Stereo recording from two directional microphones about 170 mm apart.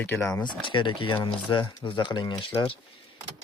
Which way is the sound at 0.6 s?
30° left (ahead or behind).